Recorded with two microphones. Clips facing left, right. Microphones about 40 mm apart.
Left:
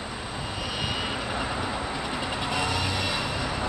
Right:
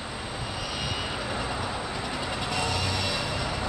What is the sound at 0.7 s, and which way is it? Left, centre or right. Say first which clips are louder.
Vehicle: left 3 dB; centre.